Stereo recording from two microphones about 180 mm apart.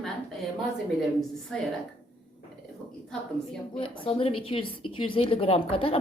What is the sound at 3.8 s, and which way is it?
Speech, 30° left (ahead or behind).